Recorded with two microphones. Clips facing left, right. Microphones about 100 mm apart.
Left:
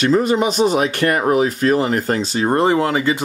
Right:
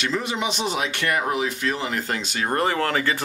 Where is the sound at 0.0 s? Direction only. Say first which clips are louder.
Left 10 dB; 45° left (ahead or behind).